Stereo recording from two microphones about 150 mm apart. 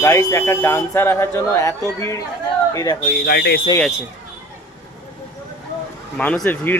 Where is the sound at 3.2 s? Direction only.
90° left.